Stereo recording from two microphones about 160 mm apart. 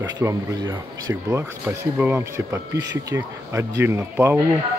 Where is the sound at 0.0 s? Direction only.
20° right (ahead or behind).